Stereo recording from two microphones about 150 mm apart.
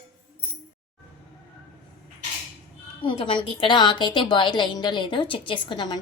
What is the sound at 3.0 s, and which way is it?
A woman's voice, 35° left (ahead or behind).